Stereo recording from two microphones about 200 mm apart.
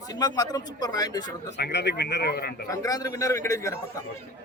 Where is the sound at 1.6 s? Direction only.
55° left (ahead or behind).